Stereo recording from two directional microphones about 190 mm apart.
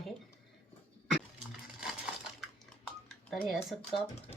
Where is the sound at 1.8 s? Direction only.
5° right (ahead or behind).